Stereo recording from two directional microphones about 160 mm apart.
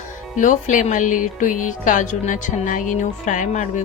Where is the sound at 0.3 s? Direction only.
55° left (ahead or behind).